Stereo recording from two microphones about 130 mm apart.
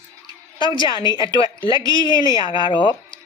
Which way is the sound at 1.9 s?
30° right (ahead or behind).